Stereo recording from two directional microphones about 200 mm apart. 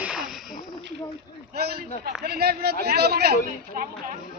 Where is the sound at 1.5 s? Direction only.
50° right (ahead or behind).